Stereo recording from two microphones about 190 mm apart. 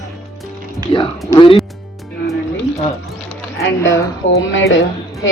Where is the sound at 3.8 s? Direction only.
15° left (ahead or behind).